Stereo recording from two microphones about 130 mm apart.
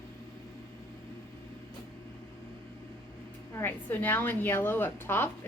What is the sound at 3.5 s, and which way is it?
A woman's voice, 15° left (ahead or behind).